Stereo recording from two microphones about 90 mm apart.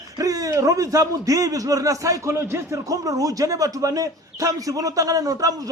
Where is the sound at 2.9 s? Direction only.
40° right (ahead or behind).